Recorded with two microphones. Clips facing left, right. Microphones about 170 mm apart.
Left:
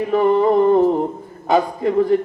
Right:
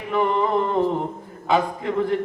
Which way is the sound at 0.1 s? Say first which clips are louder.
Left 5 dB; 40° left (ahead or behind).